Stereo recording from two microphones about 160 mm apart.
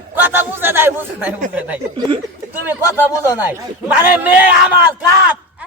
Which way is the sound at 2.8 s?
20° left (ahead or behind).